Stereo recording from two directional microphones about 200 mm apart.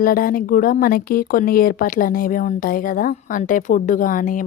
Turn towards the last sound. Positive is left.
turn(degrees=40)  # may be behind; listen again after turning